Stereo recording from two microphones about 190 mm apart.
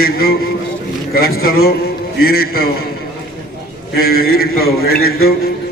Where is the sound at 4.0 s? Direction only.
50° left (ahead or behind).